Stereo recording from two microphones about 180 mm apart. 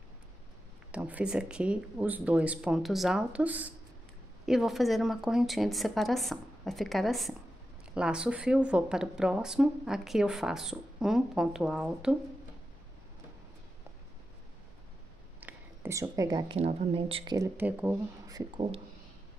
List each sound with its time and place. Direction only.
0.9 s speech: 5° right (ahead or behind)
15.4 s a sound: 15° right (ahead or behind)
16.5 s speech: 35° right (ahead or behind)
17.6 s speech: 10° right (ahead or behind)
18.2 s speech: 20° right (ahead or behind)